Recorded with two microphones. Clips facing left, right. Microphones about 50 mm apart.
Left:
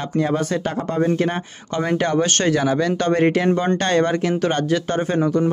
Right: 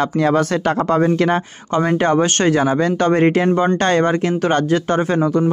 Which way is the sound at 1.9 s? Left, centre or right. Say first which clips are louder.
Right 2 dB; right.